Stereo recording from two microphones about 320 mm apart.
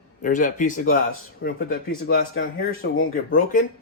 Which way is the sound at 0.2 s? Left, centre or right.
Left.